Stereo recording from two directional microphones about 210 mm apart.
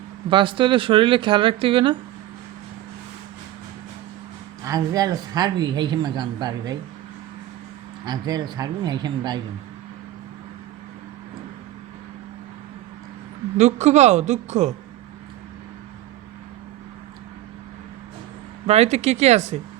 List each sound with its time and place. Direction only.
0.3 s speech: 25° right (ahead or behind)
4.6 s speech: 15° right (ahead or behind)
8.0 s speech: 20° right (ahead or behind)
13.6 s a woman's voice: 35° right (ahead or behind)
18.6 s a woman's voice: 30° right (ahead or behind)